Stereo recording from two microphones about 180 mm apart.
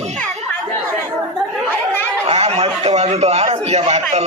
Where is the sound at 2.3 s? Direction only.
35° right (ahead or behind).